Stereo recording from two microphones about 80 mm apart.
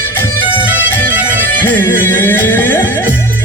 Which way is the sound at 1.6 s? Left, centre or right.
Left.